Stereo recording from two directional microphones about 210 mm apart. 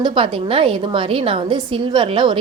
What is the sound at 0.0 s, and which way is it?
A woman's voice, 25° right (ahead or behind).